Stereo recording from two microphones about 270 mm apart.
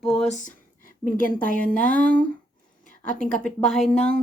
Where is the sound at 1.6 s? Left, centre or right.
Centre.